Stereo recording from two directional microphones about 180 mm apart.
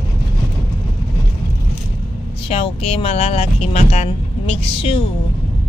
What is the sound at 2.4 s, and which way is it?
Speech, 35° left (ahead or behind).